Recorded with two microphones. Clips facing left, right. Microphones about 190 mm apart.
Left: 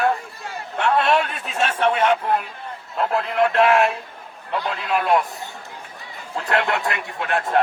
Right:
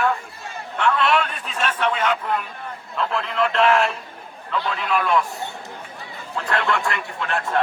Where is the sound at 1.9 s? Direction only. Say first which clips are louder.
Left 4 dB; 25° left (ahead or behind).